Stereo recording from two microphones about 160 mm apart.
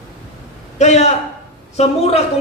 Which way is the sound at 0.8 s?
45° left (ahead or behind).